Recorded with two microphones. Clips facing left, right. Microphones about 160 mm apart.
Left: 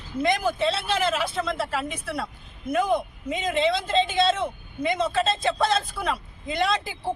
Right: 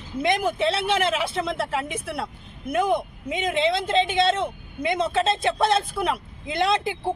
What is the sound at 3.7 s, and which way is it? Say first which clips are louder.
Speech: right 1 dB; 60° right (ahead or behind).